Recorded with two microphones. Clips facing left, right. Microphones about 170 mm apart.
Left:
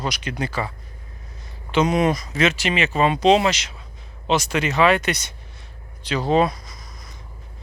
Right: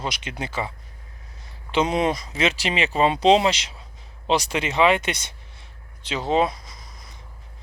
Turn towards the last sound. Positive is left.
turn(degrees=-30)  # may be behind; listen again after turning